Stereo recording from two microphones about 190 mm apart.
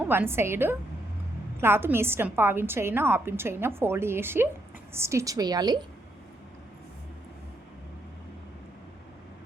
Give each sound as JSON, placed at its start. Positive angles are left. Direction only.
{"t": 0.0, "sound": "a woman's voice", "side_deg": -10}